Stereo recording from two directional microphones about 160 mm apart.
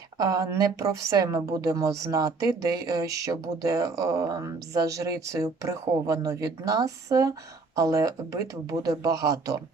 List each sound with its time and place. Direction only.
0.2 s a woman's voice: 20° right (ahead or behind)